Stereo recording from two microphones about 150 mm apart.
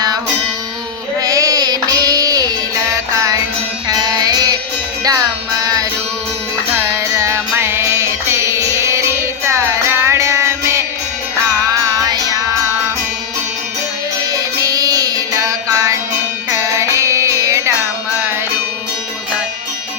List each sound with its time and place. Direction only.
1.2 s music: 25° right (ahead or behind)
12.0 s music: 25° right (ahead or behind)
14.2 s music: 25° right (ahead or behind)